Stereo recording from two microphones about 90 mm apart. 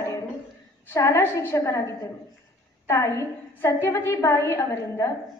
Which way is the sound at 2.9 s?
30° left (ahead or behind).